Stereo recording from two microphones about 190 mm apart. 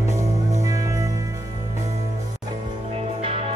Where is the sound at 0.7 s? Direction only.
15° right (ahead or behind).